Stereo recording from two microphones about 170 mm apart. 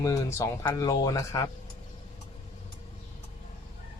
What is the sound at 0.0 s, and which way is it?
Speech, 20° left (ahead or behind).